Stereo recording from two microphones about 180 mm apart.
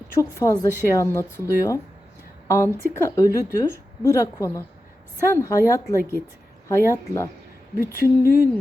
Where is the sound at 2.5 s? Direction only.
15° left (ahead or behind).